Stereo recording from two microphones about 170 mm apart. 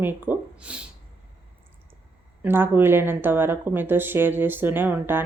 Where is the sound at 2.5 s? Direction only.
15° right (ahead or behind).